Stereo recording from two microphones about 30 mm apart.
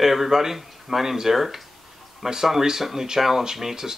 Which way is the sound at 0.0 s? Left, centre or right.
Centre.